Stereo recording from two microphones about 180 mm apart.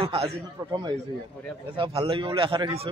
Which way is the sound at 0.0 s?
35° right (ahead or behind).